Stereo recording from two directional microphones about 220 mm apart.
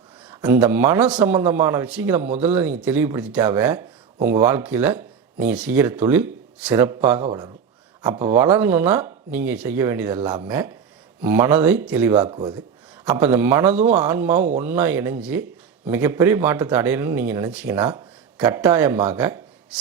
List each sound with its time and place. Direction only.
0.3 s speech: 5° right (ahead or behind)
12.3 s speech: 20° right (ahead or behind)
13.1 s speech: 10° right (ahead or behind)